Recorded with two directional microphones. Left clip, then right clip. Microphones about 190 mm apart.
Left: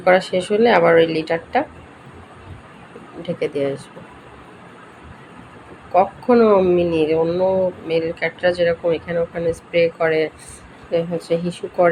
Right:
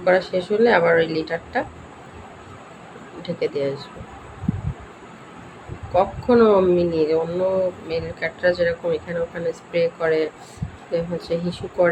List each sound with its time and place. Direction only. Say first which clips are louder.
0.0 s speech: left 3 dB; 25° left (ahead or behind)
3.2 s speech: left 2 dB; 20° left (ahead or behind)
5.9 s speech: left 3 dB; 20° left (ahead or behind)